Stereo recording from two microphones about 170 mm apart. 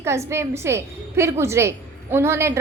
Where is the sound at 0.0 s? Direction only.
15° right (ahead or behind).